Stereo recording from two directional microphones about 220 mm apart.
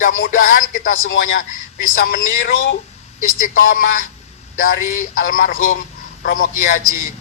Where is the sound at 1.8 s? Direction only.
40° left (ahead or behind).